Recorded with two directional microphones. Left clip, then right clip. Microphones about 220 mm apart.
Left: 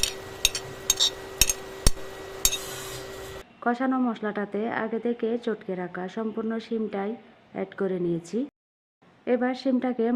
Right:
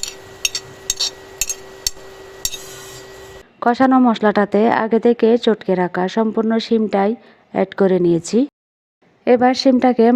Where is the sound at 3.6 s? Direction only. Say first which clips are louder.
Right 12 dB; 40° right (ahead or behind).